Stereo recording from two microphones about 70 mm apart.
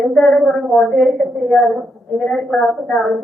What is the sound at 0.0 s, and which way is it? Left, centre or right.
A woman's voice, centre.